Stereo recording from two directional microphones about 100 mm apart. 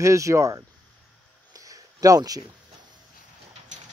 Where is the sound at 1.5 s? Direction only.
35° right (ahead or behind).